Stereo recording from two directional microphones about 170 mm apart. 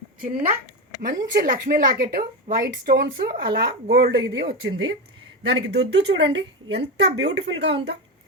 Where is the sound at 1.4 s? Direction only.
55° right (ahead or behind); by 7.8 s 90° right.